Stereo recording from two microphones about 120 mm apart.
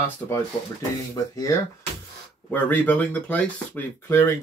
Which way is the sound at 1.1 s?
30° left (ahead or behind).